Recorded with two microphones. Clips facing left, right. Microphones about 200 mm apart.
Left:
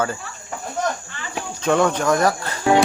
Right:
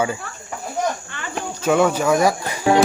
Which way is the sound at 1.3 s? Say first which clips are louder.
Right 1 dB; 5° right (ahead or behind).